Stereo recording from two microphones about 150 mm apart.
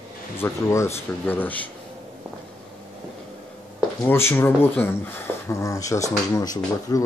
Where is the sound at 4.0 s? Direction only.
15° left (ahead or behind).